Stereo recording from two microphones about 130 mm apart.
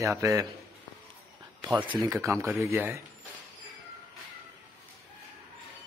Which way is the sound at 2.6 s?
15° right (ahead or behind).